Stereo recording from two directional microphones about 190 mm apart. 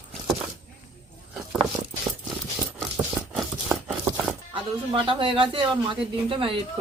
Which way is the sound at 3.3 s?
5° right (ahead or behind).